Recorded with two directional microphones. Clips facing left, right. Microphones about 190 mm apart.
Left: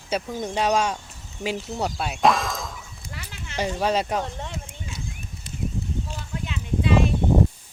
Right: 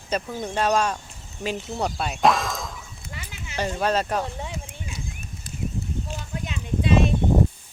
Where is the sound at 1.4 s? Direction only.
10° left (ahead or behind).